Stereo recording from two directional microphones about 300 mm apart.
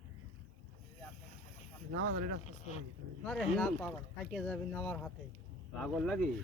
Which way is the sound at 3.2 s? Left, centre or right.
Centre.